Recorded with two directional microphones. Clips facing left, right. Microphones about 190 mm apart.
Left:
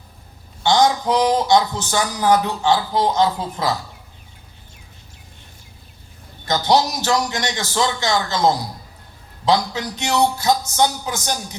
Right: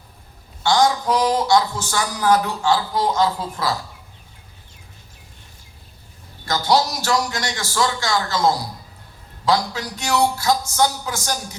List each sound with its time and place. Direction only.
0.6 s a man's voice: 20° left (ahead or behind)
6.4 s a man's voice: 20° left (ahead or behind)